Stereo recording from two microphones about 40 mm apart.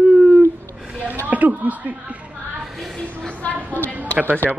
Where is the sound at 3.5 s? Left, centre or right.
Left.